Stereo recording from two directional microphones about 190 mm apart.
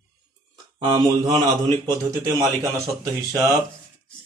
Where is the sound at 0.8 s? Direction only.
20° right (ahead or behind).